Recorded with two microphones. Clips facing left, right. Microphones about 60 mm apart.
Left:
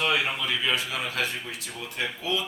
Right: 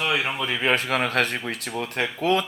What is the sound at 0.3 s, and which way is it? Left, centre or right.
Speech, right.